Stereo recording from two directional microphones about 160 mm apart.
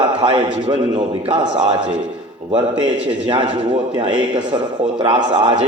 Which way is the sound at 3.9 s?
30° right (ahead or behind).